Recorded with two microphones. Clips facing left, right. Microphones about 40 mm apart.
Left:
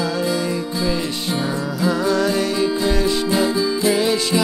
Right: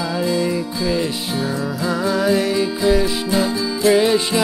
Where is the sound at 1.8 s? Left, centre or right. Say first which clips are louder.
Left 2 dB; centre.